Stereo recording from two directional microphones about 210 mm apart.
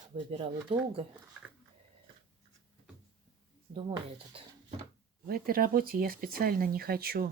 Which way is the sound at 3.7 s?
25° right (ahead or behind).